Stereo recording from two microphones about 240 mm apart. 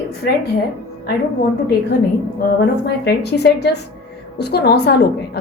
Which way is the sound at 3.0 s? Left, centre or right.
Left.